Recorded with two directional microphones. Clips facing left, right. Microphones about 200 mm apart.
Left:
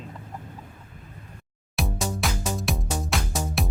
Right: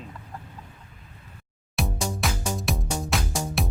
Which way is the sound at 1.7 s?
Centre (ahead or behind).